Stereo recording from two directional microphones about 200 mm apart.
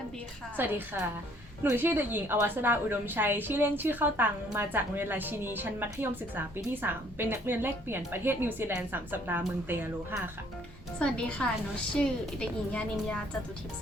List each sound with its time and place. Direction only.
0.5 s a woman's voice: 10° right (ahead or behind)
11.0 s a woman's voice: 5° left (ahead or behind)